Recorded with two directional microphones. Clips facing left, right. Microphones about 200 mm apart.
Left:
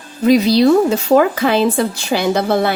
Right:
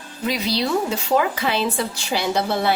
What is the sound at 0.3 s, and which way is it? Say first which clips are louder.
Speech: left 12 dB; 45° left (ahead or behind).